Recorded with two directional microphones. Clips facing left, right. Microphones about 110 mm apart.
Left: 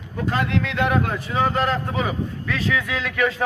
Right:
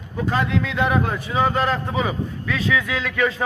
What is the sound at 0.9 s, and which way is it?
Speech, 10° right (ahead or behind).